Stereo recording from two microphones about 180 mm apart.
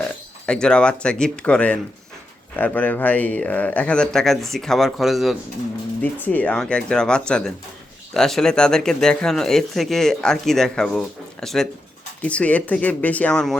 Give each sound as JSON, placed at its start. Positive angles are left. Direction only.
{"t": 0.4, "sound": "speech", "side_deg": 5}
{"t": 6.0, "sound": "speech", "side_deg": 10}